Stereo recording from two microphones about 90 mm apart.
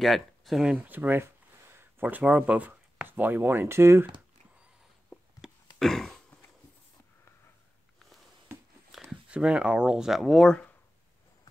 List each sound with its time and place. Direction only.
0.0 s speech: centre (ahead or behind)
0.7 s speech: 20° right (ahead or behind)
5.4 s a sound: centre (ahead or behind)
9.3 s speech: 10° right (ahead or behind)